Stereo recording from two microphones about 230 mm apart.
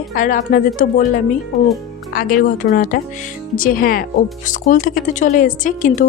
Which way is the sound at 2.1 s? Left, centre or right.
Left.